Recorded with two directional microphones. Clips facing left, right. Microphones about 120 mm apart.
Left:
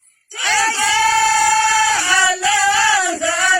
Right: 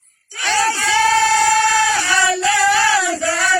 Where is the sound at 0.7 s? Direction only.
20° left (ahead or behind).